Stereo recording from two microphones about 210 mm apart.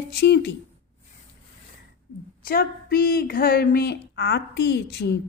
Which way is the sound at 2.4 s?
45° left (ahead or behind).